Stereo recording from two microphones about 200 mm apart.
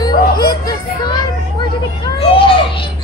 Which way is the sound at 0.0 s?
20° left (ahead or behind).